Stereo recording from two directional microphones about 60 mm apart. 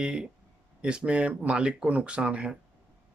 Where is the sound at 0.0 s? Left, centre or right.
Centre.